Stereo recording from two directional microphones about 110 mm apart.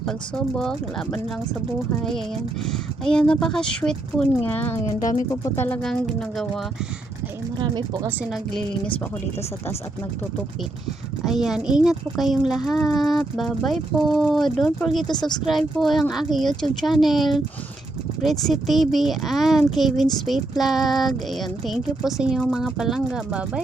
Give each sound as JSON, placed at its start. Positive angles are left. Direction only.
{"t": 0.0, "sound": "speech", "side_deg": 5}
{"t": 2.6, "sound": "speech", "side_deg": 5}
{"t": 5.8, "sound": "speech", "side_deg": 5}
{"t": 7.6, "sound": "speech", "side_deg": -45}
{"t": 11.3, "sound": "speech", "side_deg": -5}
{"t": 15.1, "sound": "speech", "side_deg": 40}
{"t": 15.4, "sound": "speech", "side_deg": 0}